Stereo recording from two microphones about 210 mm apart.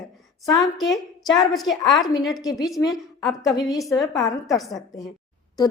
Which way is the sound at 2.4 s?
15° left (ahead or behind).